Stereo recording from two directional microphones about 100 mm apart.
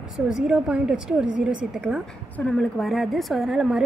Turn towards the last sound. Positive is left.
turn(degrees=0)  # may be behind; listen again after turning